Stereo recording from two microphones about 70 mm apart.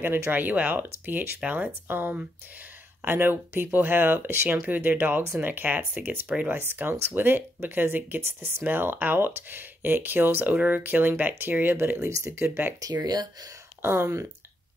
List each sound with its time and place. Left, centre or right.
0.0 s speech: right
6.7 s speech: right
12.1 s speech: right
12.4 s speech: right
12.8 s speech: right
13.8 s speech: right